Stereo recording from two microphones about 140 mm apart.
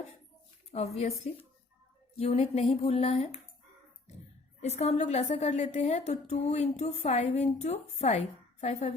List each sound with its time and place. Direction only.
0.9 s a woman's voice: 50° left (ahead or behind)
4.6 s a woman's voice: 50° left (ahead or behind)